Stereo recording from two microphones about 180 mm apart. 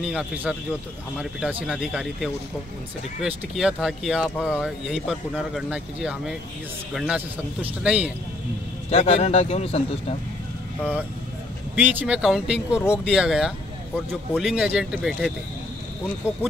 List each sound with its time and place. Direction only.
0.0 s speech: 5° right (ahead or behind)
8.9 s speech: 35° left (ahead or behind)
11.7 s speech: 10° right (ahead or behind)